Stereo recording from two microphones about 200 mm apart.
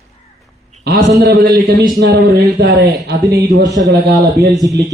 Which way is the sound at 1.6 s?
40° right (ahead or behind).